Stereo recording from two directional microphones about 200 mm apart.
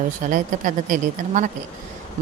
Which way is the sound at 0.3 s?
40° right (ahead or behind).